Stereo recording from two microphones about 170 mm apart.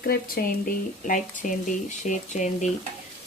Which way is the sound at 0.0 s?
60° left (ahead or behind).